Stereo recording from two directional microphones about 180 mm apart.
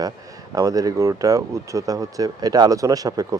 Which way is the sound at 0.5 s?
20° right (ahead or behind).